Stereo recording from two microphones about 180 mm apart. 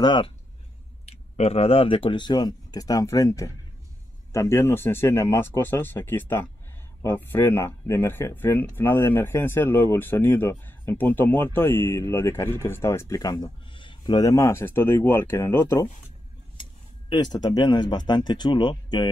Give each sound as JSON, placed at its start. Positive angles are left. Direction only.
{"t": 0.0, "sound": "speech", "side_deg": 25}
{"t": 17.1, "sound": "speech", "side_deg": 20}